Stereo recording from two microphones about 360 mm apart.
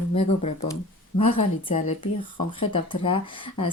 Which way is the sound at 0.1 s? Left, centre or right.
Centre.